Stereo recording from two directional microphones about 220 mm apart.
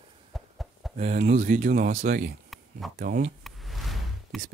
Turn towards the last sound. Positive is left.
turn(degrees=0)  # may be behind; listen again after turning